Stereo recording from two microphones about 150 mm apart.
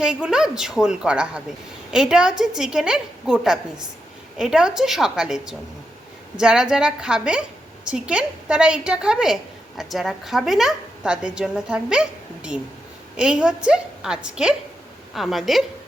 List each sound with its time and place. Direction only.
0.0 s a woman's voice: 5° right (ahead or behind)